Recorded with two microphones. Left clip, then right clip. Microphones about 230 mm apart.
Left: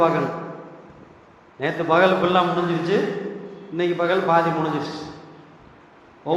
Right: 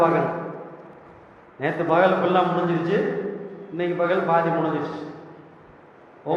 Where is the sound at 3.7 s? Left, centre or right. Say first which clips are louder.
Left 2 dB; left.